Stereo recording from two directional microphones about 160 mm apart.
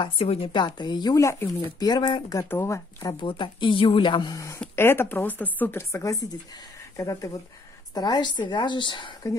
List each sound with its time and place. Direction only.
0.0 s speech: 35° left (ahead or behind)